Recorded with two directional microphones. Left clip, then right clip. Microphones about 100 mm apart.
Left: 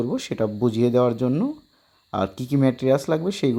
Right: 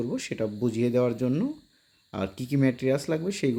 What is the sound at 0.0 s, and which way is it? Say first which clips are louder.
Speech: left 5 dB; 40° left (ahead or behind).